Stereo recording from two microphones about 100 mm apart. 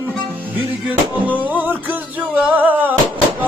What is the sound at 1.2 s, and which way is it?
Music, 15° right (ahead or behind).